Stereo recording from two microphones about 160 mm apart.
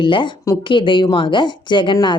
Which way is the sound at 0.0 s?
30° left (ahead or behind).